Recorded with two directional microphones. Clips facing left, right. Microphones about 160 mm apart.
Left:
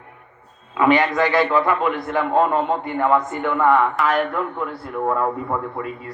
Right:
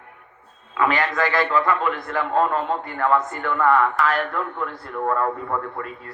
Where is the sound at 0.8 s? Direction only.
20° left (ahead or behind).